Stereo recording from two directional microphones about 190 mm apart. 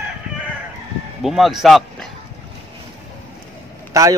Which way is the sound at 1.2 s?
Centre (ahead or behind).